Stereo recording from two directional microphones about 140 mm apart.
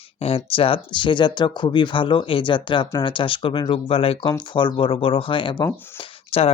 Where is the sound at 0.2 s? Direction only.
45° left (ahead or behind).